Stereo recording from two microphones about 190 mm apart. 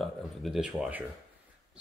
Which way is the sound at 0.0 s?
Centre (ahead or behind).